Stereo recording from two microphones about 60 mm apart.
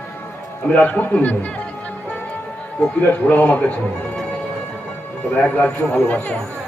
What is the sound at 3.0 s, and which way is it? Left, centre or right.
Speech, left.